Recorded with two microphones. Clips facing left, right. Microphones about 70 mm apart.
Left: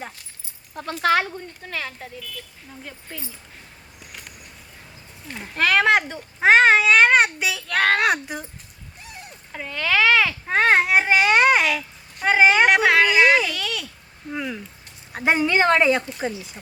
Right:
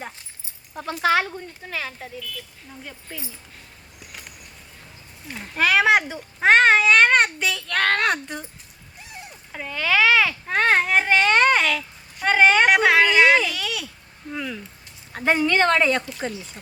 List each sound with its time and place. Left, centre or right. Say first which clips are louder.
0.7 s a child's voice: even; centre
5.3 s a child's voice: even; centre
9.5 s a child's voice: even; centre
14.3 s a child's voice: left 2 dB; centre